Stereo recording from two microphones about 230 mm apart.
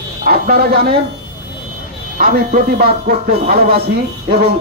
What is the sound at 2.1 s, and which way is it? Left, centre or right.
Speech, right.